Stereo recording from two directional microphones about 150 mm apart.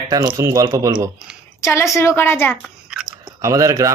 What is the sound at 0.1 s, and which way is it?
Speech, 25° right (ahead or behind).